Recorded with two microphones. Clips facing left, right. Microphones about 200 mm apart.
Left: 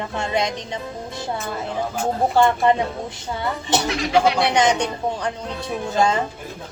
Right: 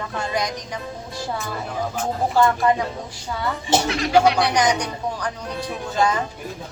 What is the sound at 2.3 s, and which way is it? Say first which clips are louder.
Speech: left 1 dB; 25° left (ahead or behind).